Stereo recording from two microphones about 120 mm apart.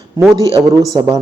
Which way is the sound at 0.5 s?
30° right (ahead or behind).